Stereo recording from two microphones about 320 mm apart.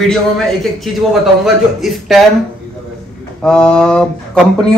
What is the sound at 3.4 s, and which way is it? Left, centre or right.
Speech, centre.